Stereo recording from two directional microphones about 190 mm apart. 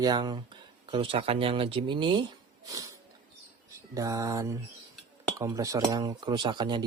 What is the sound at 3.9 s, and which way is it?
Speech, 15° right (ahead or behind).